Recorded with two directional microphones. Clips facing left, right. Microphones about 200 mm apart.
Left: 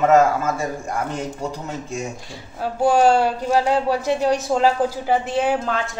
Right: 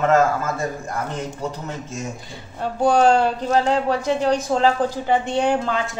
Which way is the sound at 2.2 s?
Centre (ahead or behind).